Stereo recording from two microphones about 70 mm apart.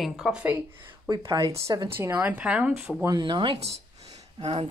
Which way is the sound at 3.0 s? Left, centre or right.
Right.